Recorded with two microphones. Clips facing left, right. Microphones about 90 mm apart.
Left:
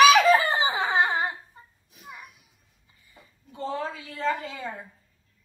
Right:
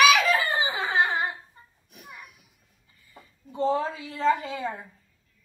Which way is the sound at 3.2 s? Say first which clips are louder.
Right 7 dB; 25° right (ahead or behind).